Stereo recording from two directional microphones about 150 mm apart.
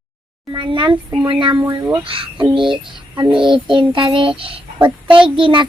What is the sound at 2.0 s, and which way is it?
Child singing, 35° right (ahead or behind).